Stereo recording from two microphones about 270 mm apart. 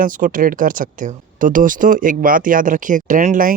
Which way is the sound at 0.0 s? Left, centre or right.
Right.